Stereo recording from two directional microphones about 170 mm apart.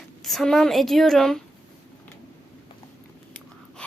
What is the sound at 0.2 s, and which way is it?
Speech, centre (ahead or behind).